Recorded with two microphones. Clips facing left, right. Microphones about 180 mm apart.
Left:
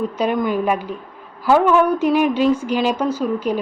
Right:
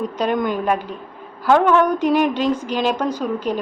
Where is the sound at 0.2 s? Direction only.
5° left (ahead or behind).